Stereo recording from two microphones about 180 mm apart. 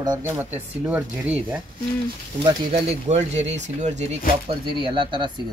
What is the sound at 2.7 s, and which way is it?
Speech, 35° right (ahead or behind).